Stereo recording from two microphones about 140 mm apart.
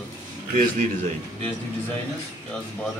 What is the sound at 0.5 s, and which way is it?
Speech, 70° right (ahead or behind).